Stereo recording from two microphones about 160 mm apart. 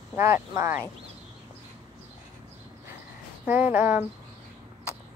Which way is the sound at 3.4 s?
10° right (ahead or behind).